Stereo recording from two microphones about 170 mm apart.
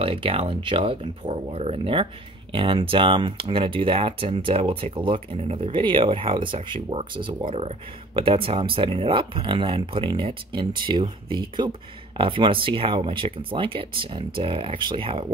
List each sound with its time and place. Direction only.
0.0 s speech: 35° right (ahead or behind)